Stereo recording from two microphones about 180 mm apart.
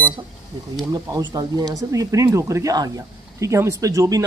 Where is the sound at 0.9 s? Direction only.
20° right (ahead or behind).